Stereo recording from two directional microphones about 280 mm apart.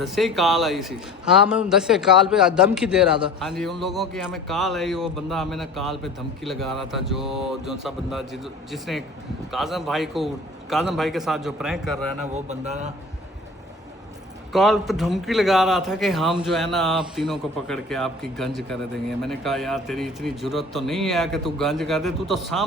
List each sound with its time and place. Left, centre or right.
0.0 s a man's voice: centre
12.3 s speech: right
14.5 s a man's voice: centre